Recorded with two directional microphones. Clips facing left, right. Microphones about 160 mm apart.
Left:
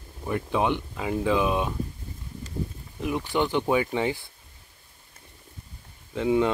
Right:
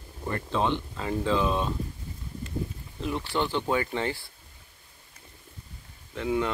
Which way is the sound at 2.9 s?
15° left (ahead or behind).